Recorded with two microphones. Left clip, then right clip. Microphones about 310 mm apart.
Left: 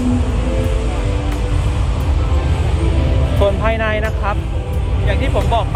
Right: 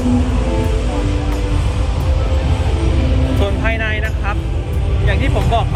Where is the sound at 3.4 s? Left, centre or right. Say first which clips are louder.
Left 5 dB; centre.